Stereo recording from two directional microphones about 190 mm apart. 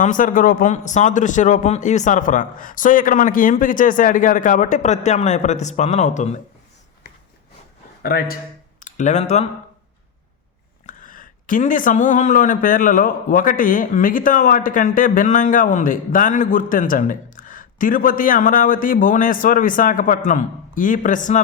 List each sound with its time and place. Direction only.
0.0 s a man's voice: 45° left (ahead or behind)
8.0 s speech: 50° left (ahead or behind)
8.8 s speech: 40° left (ahead or behind)
10.8 s speech: 45° left (ahead or behind)